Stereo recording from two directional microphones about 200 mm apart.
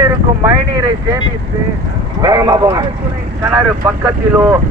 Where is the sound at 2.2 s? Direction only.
20° right (ahead or behind).